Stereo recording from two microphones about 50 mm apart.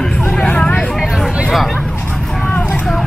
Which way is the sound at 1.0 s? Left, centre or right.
Centre.